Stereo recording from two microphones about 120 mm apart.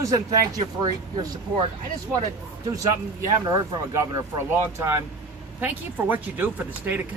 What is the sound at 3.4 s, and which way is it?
A man's voice, 30° right (ahead or behind).